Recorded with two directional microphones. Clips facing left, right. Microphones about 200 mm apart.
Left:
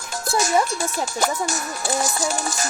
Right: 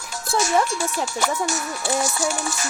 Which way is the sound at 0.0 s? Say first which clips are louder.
Left 1 dB; 45° left (ahead or behind).